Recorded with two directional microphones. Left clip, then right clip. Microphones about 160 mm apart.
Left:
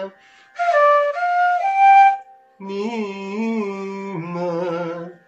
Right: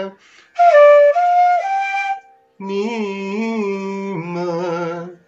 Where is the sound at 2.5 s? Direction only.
35° right (ahead or behind).